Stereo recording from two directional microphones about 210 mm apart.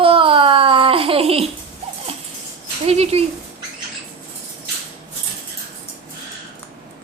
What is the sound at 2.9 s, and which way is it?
Speech, 30° right (ahead or behind).